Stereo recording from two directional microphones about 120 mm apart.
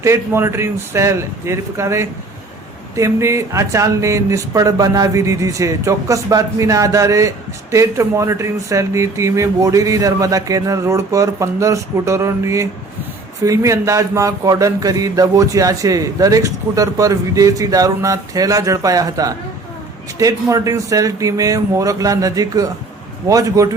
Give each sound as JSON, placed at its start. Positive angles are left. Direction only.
{"t": 0.0, "sound": "speech", "side_deg": -20}